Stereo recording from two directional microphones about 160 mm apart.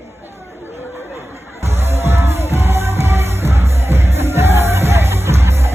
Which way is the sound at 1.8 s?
15° right (ahead or behind).